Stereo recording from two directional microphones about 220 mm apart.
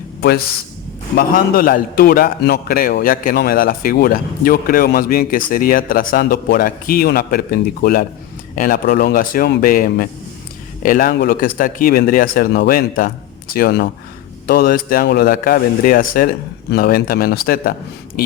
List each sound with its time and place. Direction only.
0.2 s a man's voice: 45° left (ahead or behind)